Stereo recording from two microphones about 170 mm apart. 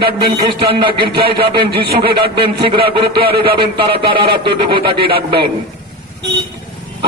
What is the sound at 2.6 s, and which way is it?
A man's voice, 30° right (ahead or behind).